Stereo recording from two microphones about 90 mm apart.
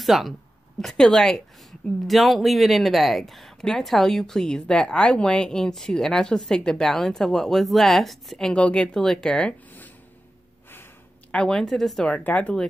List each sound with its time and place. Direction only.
0.0 s a woman's voice: centre (ahead or behind); by 9.9 s 20° left (ahead or behind)
11.3 s a woman's voice: 5° left (ahead or behind)
12.1 s speech: 15° left (ahead or behind)